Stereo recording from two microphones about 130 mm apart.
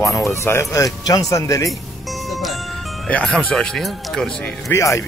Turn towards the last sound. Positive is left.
turn(degrees=25)  # may be behind; listen again after turning